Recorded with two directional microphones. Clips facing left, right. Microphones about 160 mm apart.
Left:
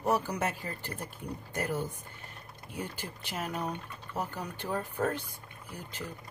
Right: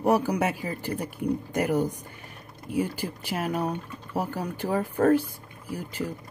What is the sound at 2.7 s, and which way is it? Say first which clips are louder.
Speech: right 12 dB; 10° right (ahead or behind).